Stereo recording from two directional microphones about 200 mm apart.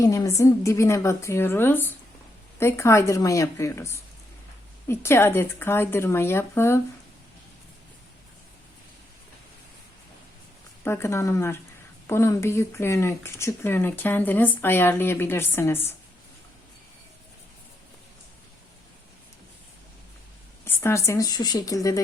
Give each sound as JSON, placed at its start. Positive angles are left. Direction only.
{"t": 0.0, "sound": "speech", "side_deg": 15}
{"t": 10.8, "sound": "speech", "side_deg": 15}
{"t": 20.7, "sound": "speech", "side_deg": 15}